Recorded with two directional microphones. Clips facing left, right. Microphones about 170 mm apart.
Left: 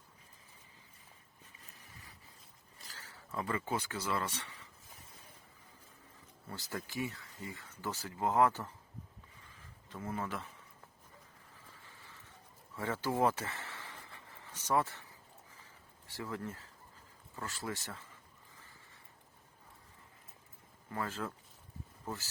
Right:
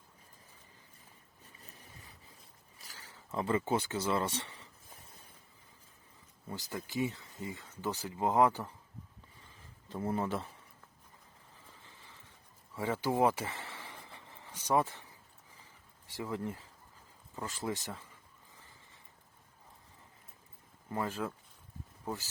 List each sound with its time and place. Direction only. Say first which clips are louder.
2.9 s speech: right 3 dB; 15° right (ahead or behind)
6.5 s speech: right 3 dB; 15° right (ahead or behind)
9.9 s speech: right 6 dB; 30° right (ahead or behind)
12.7 s a sound: right 3 dB; 15° right (ahead or behind)
16.1 s speech: right 4 dB; 15° right (ahead or behind)
20.9 s speech: right 3 dB; 15° right (ahead or behind)